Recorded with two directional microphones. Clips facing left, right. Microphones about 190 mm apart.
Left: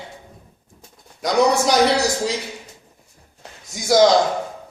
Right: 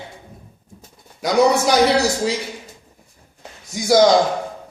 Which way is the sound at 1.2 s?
Centre (ahead or behind).